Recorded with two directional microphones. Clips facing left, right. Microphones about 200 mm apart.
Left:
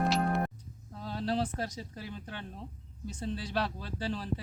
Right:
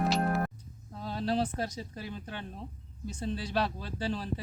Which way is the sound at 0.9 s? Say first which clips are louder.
Right 2 dB; 15° right (ahead or behind).